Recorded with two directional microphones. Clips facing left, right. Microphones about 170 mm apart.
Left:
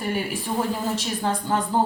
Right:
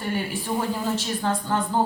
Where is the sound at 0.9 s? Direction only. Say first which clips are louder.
Even; 10° left (ahead or behind).